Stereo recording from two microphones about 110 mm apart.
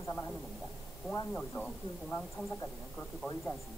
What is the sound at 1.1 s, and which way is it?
Speech, 15° left (ahead or behind).